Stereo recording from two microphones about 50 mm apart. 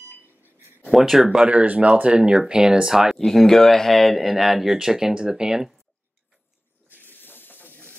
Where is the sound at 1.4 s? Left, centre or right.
Right; by 3.2 s centre.